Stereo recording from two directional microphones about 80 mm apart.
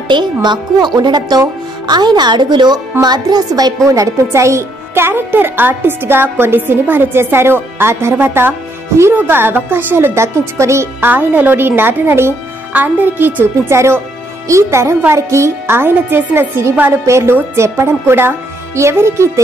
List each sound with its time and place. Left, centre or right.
0.1 s a woman's voice: right
11.1 s a woman's voice: right